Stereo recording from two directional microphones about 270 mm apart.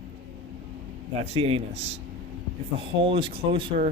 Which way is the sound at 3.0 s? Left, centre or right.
Centre.